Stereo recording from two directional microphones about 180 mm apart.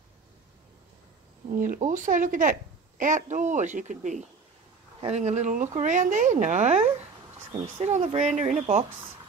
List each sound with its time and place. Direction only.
1.5 s speech: 45° right (ahead or behind)